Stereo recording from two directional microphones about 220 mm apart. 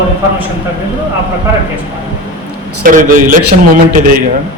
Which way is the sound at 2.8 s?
35° right (ahead or behind).